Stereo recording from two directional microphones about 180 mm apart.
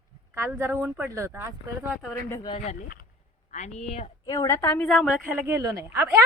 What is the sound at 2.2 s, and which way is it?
Speech, 15° left (ahead or behind).